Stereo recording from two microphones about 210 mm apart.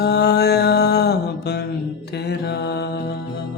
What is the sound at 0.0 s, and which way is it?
Mantra, 50° left (ahead or behind).